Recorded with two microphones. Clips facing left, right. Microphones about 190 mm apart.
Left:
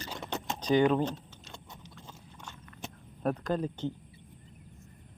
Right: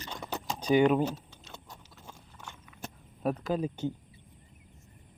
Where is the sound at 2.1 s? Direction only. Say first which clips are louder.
Right 3 dB; 10° right (ahead or behind).